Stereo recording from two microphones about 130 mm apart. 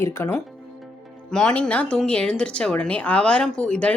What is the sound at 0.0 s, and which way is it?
Speech, 20° left (ahead or behind).